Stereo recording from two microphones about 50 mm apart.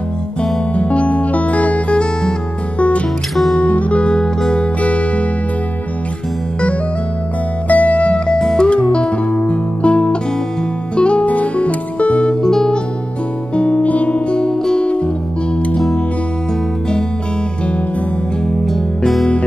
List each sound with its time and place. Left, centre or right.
0.7 s music: left
3.5 s music: left
4.8 s music: left
7.6 s music: left
8.4 s music: centre
8.6 s music: left
13.6 s music: left
14.5 s music: centre
14.8 s music: left
18.7 s music: centre